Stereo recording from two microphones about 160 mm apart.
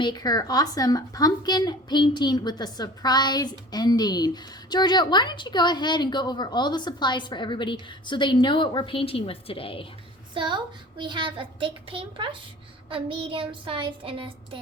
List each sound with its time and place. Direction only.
0.0 s a woman's voice: 25° left (ahead or behind)
10.3 s a child's voice: 30° right (ahead or behind)